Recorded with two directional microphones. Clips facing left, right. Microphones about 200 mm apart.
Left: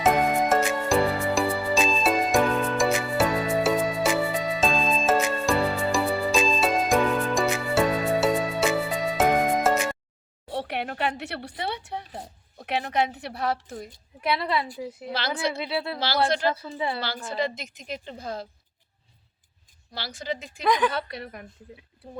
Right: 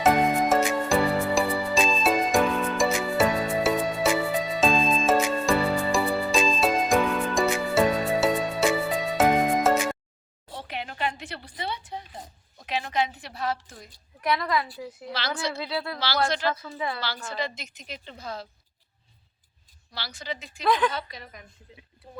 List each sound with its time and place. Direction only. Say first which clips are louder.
0.0 s music: even; centre (ahead or behind)
10.5 s a sound: left 6 dB; 65° left (ahead or behind)
12.5 s a woman's voice: left 2 dB; 60° left (ahead or behind)
14.2 s a woman's voice: even; 30° left (ahead or behind)
17.3 s a woman's voice: left 4 dB; 50° left (ahead or behind)
19.9 s a woman's voice: left 4 dB; 50° left (ahead or behind)
20.7 s a woman's voice: left 1 dB; 10° left (ahead or behind)
20.9 s a woman's voice: left 4 dB; 65° left (ahead or behind)